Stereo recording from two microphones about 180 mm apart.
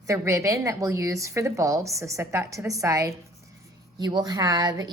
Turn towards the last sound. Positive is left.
turn(degrees=-20)  # may be behind; listen again after turning